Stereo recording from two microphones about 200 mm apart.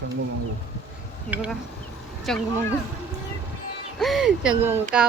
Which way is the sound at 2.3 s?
Centre (ahead or behind).